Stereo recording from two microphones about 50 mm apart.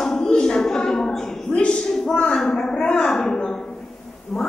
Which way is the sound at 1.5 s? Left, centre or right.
Left.